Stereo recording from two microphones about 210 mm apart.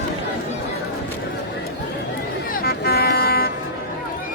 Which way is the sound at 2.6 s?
50° left (ahead or behind).